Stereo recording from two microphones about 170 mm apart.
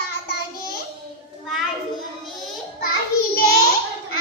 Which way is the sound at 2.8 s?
60° left (ahead or behind).